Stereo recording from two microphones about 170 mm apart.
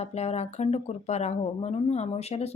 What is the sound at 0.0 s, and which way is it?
Speech, 40° left (ahead or behind).